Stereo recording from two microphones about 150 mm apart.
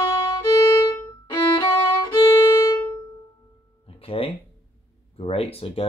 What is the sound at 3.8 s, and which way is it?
Music, 40° left (ahead or behind).